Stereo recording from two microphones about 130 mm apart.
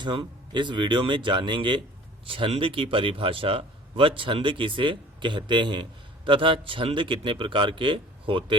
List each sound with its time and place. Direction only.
0.0 s a man's voice: 35° right (ahead or behind)